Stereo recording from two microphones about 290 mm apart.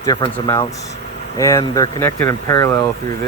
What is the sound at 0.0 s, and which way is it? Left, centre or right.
Speech, centre.